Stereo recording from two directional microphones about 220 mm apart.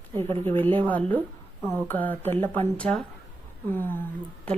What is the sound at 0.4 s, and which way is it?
Speech, 10° left (ahead or behind).